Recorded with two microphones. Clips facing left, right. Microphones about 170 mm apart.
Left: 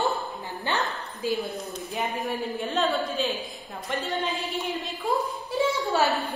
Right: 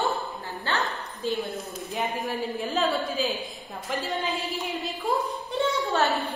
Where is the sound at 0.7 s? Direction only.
Centre (ahead or behind).